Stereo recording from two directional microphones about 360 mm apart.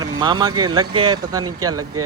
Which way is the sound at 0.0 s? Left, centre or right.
Centre.